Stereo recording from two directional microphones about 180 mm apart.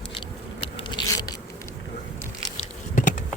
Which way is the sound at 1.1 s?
20° left (ahead or behind).